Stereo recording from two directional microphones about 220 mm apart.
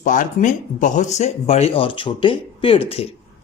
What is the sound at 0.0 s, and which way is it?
Speech, 35° left (ahead or behind).